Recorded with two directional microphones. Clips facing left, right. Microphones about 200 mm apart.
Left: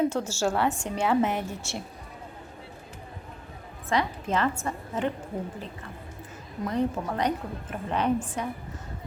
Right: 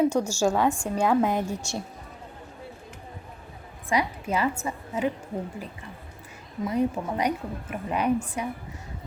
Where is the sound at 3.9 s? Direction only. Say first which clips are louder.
Right 1 dB; 10° right (ahead or behind).